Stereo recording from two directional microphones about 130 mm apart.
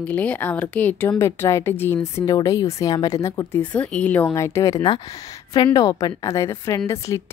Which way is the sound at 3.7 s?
10° left (ahead or behind).